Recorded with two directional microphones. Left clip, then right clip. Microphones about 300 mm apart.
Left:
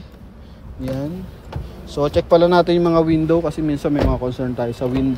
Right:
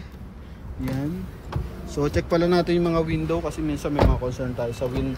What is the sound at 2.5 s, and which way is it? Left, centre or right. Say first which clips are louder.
Speech: left 7 dB; centre.